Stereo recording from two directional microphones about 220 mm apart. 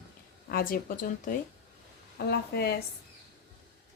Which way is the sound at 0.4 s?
40° left (ahead or behind).